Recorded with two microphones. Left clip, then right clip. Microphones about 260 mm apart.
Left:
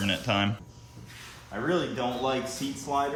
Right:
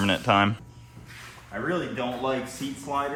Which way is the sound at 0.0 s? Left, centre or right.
Centre.